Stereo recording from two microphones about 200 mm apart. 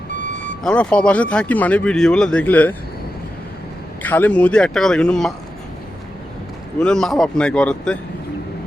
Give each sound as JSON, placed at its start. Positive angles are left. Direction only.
{"t": 0.6, "sound": "speech", "side_deg": 5}
{"t": 4.0, "sound": "speech", "side_deg": 10}
{"t": 6.7, "sound": "speech", "side_deg": 5}